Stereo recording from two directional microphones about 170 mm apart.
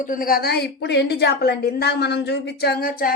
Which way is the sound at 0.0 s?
55° left (ahead or behind).